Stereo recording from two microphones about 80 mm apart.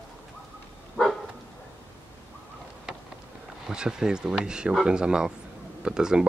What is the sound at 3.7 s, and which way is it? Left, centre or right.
Speech, centre.